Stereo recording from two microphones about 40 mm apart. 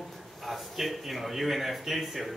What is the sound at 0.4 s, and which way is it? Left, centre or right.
A man's voice, centre.